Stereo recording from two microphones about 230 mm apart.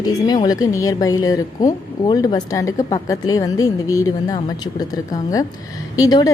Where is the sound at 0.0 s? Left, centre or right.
Centre.